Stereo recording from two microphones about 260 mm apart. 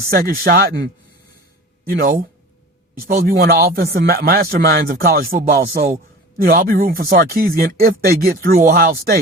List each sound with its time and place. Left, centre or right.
0.1 s speech: right